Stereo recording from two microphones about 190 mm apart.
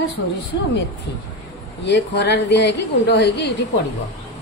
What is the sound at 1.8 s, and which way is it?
A woman's voice, 65° left (ahead or behind).